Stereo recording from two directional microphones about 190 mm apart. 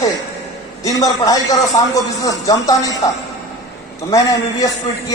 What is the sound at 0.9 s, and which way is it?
Speech, 20° left (ahead or behind).